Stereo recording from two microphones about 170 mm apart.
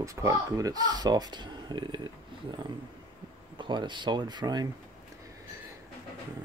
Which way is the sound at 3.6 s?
25° right (ahead or behind).